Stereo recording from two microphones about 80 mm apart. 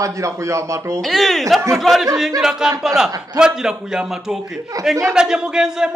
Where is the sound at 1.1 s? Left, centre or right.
Centre.